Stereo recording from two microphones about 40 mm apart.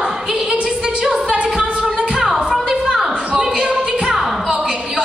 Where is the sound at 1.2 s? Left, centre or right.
Right.